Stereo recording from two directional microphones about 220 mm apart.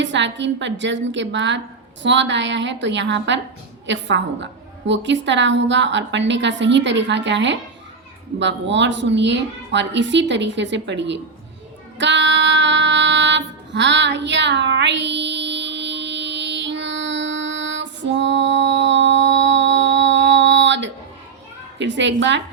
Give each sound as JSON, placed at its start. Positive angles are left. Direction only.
{"t": 0.0, "sound": "a woman's voice", "side_deg": -55}
{"t": 11.9, "sound": "music", "side_deg": -55}
{"t": 21.8, "sound": "a woman's voice", "side_deg": -55}